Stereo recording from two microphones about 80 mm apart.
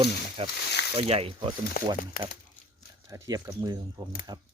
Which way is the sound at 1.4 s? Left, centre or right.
Right.